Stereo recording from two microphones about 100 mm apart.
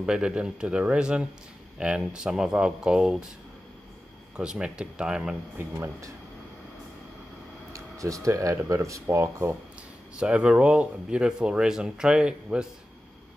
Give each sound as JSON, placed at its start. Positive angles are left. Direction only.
{"t": 0.0, "sound": "speech", "side_deg": -10}
{"t": 4.4, "sound": "speech", "side_deg": -10}
{"t": 5.6, "sound": "speech", "side_deg": -30}
{"t": 7.7, "sound": "a sound", "side_deg": -30}
{"t": 8.3, "sound": "speech", "side_deg": -30}
{"t": 10.1, "sound": "speech", "side_deg": -10}